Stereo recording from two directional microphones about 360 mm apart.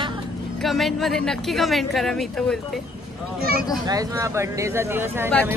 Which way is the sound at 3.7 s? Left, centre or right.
Centre.